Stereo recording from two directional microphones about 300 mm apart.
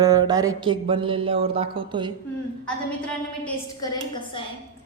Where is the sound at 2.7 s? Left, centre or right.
Centre.